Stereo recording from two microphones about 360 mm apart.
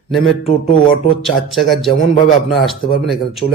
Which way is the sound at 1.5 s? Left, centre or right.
Centre.